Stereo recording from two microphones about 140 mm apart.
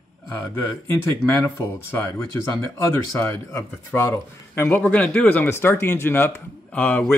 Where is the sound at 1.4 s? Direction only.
15° left (ahead or behind).